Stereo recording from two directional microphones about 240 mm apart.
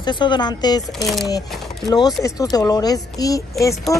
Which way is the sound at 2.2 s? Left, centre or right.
Centre.